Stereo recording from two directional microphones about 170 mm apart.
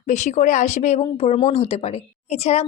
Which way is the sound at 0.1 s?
45° left (ahead or behind).